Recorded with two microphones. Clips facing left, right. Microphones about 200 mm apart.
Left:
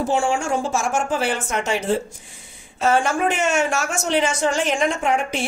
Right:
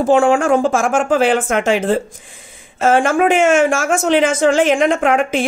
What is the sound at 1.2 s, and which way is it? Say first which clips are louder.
Speech: right 9 dB; 90° right.